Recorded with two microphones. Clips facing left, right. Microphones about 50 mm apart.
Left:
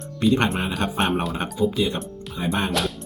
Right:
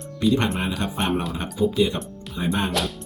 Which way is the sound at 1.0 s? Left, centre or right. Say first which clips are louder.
Right 1 dB; centre.